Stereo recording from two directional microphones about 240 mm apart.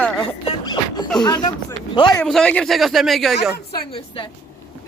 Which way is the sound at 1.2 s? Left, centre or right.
Centre.